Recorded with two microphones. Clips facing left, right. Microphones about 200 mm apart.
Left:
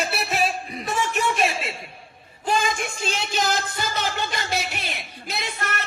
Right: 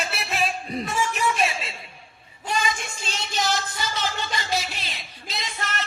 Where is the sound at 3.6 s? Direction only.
55° left (ahead or behind).